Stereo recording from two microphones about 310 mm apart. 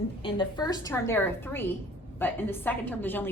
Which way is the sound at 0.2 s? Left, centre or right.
Centre.